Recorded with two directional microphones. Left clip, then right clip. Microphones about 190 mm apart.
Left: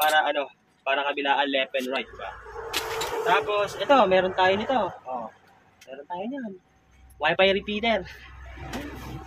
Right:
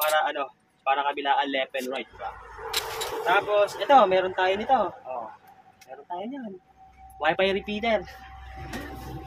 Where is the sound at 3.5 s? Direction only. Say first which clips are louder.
Right 5 dB; 20° right (ahead or behind).